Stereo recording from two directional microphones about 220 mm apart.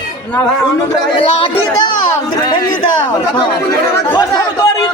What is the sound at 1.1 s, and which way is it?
Speech, 20° left (ahead or behind).